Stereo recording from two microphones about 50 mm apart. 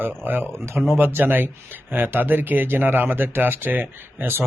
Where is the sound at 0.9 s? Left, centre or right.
Right.